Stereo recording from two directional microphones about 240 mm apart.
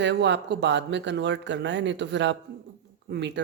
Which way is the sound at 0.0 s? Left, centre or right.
Right.